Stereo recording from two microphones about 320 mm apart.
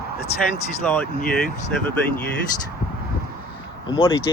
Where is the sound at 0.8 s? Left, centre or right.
Centre.